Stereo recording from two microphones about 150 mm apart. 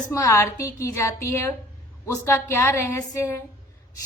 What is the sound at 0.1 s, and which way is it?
A woman's voice, 20° left (ahead or behind).